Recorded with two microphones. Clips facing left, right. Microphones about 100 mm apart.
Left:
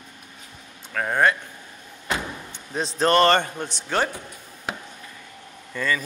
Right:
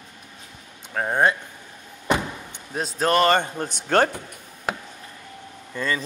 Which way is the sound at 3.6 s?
50° right (ahead or behind).